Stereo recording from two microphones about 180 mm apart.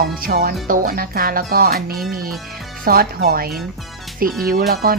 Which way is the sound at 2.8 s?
55° right (ahead or behind).